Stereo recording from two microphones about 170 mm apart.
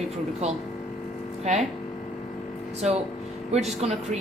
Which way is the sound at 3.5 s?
40° right (ahead or behind).